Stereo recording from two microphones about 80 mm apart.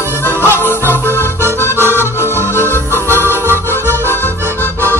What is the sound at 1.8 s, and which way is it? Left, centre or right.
Accordion, right.